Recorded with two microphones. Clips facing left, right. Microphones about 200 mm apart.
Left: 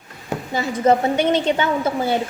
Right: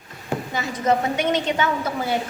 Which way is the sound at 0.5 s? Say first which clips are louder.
Left 5 dB; 30° left (ahead or behind).